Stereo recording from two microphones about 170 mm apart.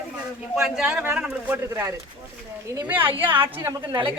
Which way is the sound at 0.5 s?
5° right (ahead or behind).